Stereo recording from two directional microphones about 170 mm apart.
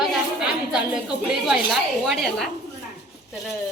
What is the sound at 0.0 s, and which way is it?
A woman's voice, 5° right (ahead or behind).